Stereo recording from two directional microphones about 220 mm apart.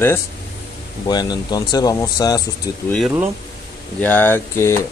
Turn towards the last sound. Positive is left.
turn(degrees=10)  # may be behind; listen again after turning